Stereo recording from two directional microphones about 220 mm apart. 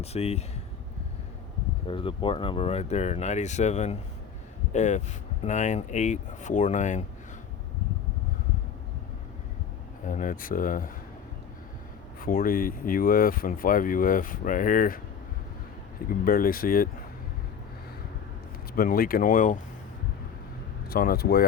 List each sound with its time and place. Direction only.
0.0 s speech: 30° left (ahead or behind)
1.9 s speech: 25° left (ahead or behind)
10.1 s speech: 40° left (ahead or behind)
12.2 s speech: 40° left (ahead or behind)
16.0 s speech: 40° left (ahead or behind)
18.8 s speech: 40° left (ahead or behind)
20.9 s speech: 45° left (ahead or behind)